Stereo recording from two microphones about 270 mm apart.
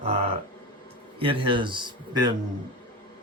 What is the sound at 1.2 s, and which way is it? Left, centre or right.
A man's voice, centre.